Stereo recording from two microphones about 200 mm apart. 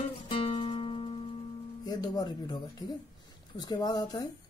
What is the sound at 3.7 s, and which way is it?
Speech, 20° left (ahead or behind).